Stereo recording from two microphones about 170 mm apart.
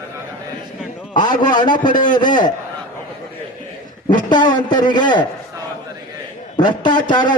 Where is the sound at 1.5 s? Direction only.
25° left (ahead or behind).